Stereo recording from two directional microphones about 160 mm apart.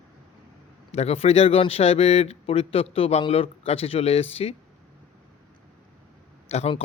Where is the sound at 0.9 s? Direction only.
40° left (ahead or behind).